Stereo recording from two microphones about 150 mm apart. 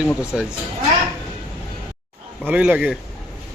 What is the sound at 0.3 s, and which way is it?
Speech, 5° right (ahead or behind).